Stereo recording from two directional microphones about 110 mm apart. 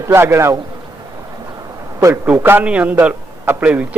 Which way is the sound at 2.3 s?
20° right (ahead or behind).